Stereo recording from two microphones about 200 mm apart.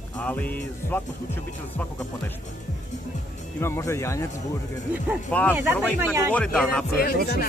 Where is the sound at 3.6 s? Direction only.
15° left (ahead or behind).